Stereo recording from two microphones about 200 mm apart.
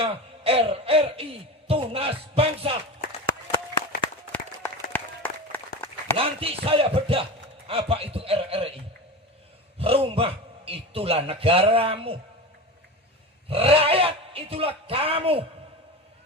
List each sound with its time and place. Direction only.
0.0 s music: 30° right (ahead or behind)
4.3 s applause: 10° left (ahead or behind)
6.1 s music: 30° right (ahead or behind)
13.5 s music: 30° right (ahead or behind)